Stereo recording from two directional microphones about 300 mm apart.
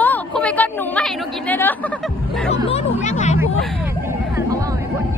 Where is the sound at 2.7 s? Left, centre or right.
Left.